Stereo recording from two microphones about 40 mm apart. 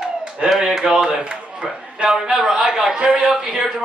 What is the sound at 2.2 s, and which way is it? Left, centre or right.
Speech, centre.